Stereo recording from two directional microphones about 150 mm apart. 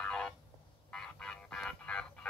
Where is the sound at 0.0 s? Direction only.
5° left (ahead or behind).